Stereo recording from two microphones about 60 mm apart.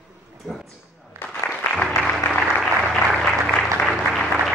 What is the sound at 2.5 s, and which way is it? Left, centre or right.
Applause, centre.